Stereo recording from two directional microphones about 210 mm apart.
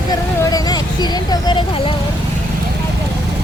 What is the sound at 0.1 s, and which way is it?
Vehicle, 20° left (ahead or behind).